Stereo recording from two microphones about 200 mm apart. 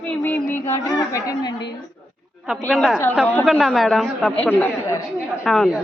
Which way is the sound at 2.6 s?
Centre (ahead or behind).